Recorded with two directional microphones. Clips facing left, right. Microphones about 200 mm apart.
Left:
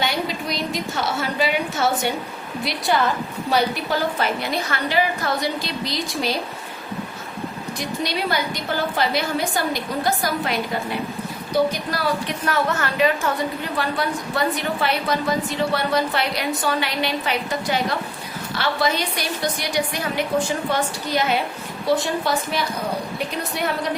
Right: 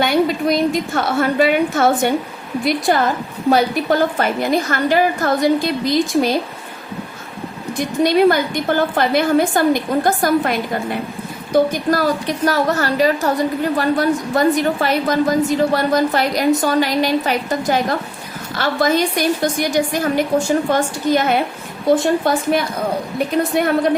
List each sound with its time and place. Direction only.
0.0 s a woman's voice: 50° right (ahead or behind)
7.8 s a woman's voice: 50° right (ahead or behind)